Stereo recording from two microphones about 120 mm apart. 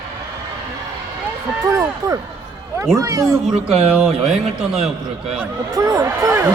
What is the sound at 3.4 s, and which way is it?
A man's voice, 5° right (ahead or behind).